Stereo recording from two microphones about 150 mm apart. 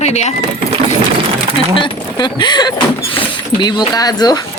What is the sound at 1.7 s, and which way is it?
Speech, 30° left (ahead or behind).